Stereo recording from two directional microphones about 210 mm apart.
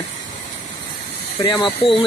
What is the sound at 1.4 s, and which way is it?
Speech, 20° left (ahead or behind).